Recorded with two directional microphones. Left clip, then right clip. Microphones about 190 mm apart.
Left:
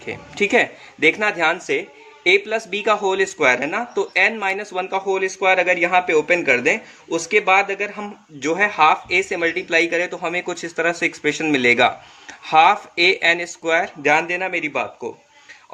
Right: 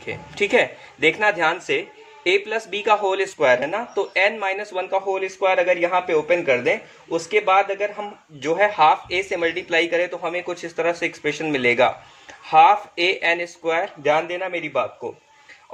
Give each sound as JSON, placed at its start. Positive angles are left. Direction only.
{"t": 0.0, "sound": "speech", "side_deg": 25}